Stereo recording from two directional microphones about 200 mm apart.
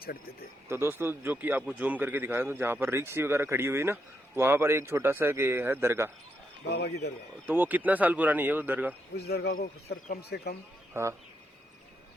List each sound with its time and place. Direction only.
0.7 s speech: 10° right (ahead or behind)
6.7 s speech: 55° left (ahead or behind)
7.4 s speech: 10° right (ahead or behind)
9.1 s speech: 55° left (ahead or behind)
11.0 s speech: 15° right (ahead or behind)